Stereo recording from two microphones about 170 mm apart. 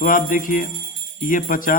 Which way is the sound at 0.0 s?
55° left (ahead or behind).